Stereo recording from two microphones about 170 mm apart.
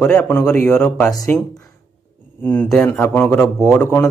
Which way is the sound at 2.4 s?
5° left (ahead or behind).